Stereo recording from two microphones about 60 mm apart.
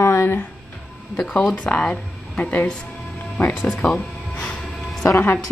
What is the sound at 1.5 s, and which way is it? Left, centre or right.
Speech, left.